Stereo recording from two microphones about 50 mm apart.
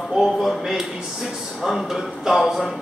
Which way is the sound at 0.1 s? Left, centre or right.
Centre.